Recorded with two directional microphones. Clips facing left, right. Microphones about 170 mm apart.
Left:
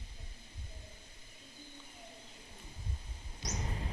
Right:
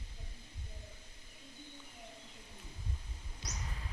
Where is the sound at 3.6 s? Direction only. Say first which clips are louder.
Left 8 dB; 35° left (ahead or behind).